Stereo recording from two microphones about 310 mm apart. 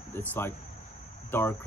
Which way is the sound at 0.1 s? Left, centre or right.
Centre.